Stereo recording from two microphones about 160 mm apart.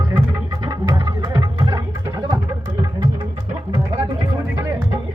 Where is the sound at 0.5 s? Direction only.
25° right (ahead or behind).